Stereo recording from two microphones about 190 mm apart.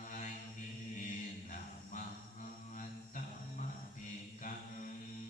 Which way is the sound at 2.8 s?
45° left (ahead or behind).